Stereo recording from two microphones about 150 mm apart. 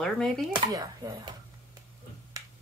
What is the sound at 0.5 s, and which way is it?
Speech, 25° right (ahead or behind).